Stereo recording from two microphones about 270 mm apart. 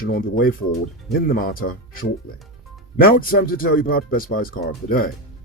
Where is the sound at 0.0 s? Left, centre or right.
Left.